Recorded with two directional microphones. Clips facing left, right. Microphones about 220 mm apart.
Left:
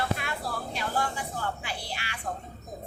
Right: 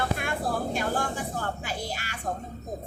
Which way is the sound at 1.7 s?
45° right (ahead or behind).